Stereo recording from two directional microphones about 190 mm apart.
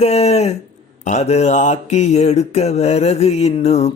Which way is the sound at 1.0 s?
35° left (ahead or behind).